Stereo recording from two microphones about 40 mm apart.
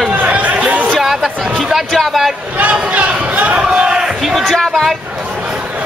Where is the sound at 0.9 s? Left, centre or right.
Centre.